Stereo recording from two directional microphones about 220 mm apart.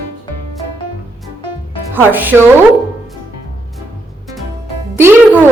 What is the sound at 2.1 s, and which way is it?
Speech, 10° right (ahead or behind).